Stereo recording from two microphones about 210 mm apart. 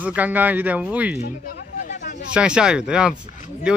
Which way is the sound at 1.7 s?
40° left (ahead or behind).